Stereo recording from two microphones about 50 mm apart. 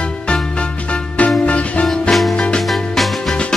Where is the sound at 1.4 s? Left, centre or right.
Left.